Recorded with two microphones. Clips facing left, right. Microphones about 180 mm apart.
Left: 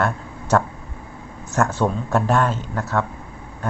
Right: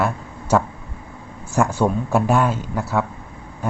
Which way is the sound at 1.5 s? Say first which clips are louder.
Right 2 dB; 10° right (ahead or behind).